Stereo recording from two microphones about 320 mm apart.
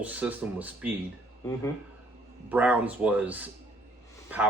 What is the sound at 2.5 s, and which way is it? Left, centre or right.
Speech, centre.